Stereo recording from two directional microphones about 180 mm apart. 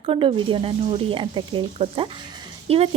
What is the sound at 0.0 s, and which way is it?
A woman's voice, 30° right (ahead or behind).